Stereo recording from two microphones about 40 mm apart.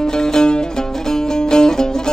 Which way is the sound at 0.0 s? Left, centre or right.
Centre.